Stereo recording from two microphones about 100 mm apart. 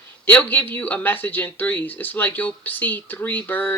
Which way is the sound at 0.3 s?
20° left (ahead or behind).